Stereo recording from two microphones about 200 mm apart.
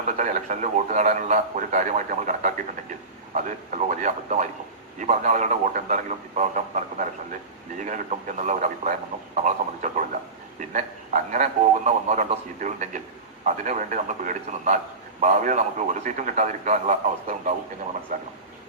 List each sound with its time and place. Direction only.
0.2 s a man's voice: 40° right (ahead or behind)